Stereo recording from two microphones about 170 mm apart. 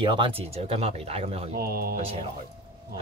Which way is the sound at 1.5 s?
65° right (ahead or behind).